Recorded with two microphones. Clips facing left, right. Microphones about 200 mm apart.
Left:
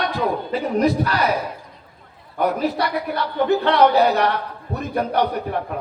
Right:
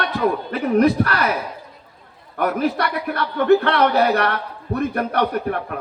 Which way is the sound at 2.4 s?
60° right (ahead or behind).